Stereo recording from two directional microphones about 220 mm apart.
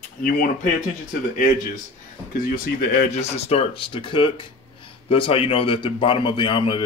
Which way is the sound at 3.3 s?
25° left (ahead or behind).